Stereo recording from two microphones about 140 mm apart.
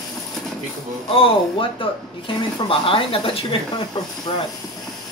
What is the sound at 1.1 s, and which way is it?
Speech, 40° left (ahead or behind).